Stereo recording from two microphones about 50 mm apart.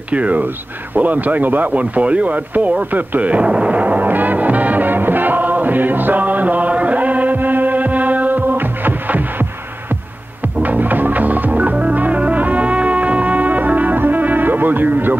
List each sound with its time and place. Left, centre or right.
0.1 s speech: right
2.9 s music: right
10.6 s music: right